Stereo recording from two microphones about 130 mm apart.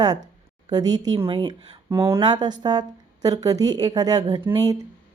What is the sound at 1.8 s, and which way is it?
Speech, 20° right (ahead or behind).